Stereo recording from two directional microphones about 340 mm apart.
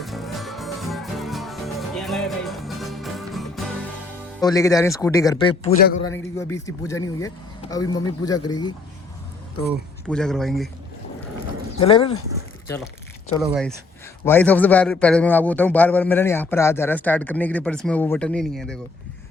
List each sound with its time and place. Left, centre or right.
0.0 s music: centre
4.4 s speech: centre
6.1 s speech: centre
10.1 s a man's voice: centre
11.8 s speech: centre
13.4 s a man's voice: centre